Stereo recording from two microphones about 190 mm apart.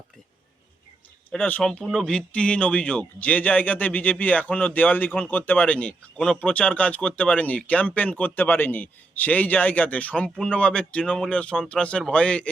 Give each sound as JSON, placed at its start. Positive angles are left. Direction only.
{"t": 1.3, "sound": "speech", "side_deg": 5}